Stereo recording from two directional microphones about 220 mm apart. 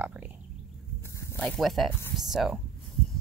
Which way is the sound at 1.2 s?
10° left (ahead or behind).